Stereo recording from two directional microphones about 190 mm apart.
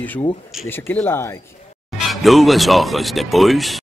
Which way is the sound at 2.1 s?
Centre (ahead or behind).